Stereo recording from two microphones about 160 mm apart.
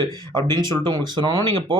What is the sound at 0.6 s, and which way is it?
Speech, 25° right (ahead or behind).